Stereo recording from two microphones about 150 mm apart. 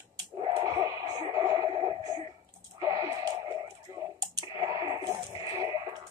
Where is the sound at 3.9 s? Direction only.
25° right (ahead or behind).